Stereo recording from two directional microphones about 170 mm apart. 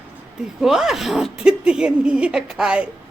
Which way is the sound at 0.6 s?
5° right (ahead or behind).